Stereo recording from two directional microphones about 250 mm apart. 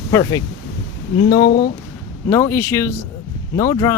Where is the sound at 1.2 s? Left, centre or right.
Centre.